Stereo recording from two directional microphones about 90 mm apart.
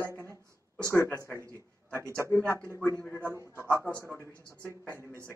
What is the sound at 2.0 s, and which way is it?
Speech, 30° right (ahead or behind).